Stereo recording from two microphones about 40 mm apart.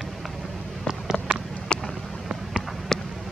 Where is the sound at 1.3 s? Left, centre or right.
Right.